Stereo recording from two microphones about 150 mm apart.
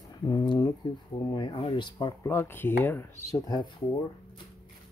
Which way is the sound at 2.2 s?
15° left (ahead or behind).